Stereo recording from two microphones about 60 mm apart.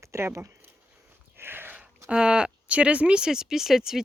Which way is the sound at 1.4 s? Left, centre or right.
Right.